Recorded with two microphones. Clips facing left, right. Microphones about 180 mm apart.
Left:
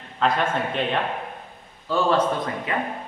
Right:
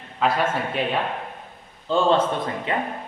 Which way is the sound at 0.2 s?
5° right (ahead or behind).